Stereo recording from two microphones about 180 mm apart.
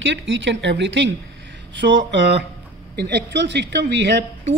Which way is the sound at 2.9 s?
70° right (ahead or behind).